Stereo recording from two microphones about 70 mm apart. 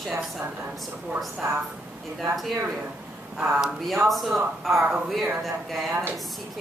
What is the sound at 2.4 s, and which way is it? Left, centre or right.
Speech, centre.